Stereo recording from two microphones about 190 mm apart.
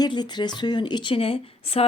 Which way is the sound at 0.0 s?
20° left (ahead or behind).